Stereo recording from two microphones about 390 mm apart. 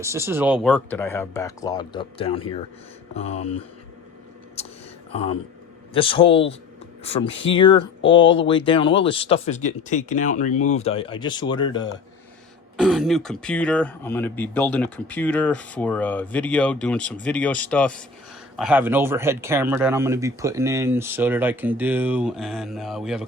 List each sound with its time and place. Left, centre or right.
0.0 s speech: centre
4.6 s a sound: centre
5.1 s speech: centre
12.8 s speech: centre